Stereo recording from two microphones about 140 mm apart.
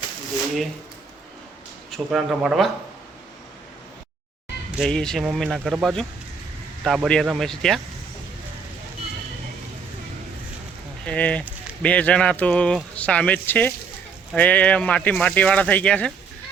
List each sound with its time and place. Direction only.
2.0 s speech: 5° right (ahead or behind)
4.8 s speech: 5° left (ahead or behind)
11.0 s speech: 10° left (ahead or behind)